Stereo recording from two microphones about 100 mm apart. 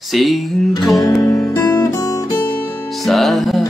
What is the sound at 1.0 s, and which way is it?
Music, 35° left (ahead or behind).